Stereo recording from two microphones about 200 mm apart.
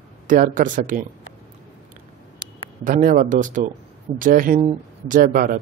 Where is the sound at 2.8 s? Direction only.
40° right (ahead or behind).